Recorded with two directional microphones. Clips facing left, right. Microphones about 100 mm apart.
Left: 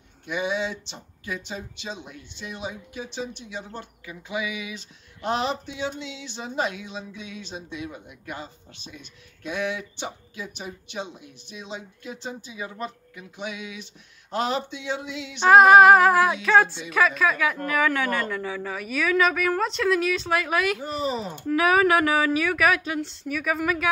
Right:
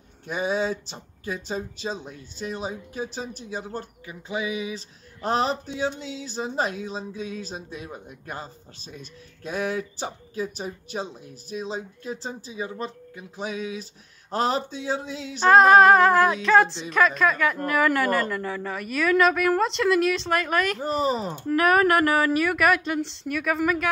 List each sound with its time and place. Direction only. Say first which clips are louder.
0.3 s speech: right 2 dB; 40° right (ahead or behind)
15.4 s a woman's voice: left 1 dB; 5° left (ahead or behind)
20.8 s speech: right 3 dB; 40° right (ahead or behind)
21.5 s a woman's voice: even; centre (ahead or behind)